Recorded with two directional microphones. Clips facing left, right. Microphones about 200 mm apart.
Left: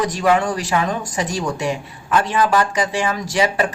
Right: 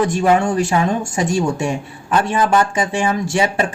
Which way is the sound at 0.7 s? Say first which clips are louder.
Right 3 dB; 30° right (ahead or behind).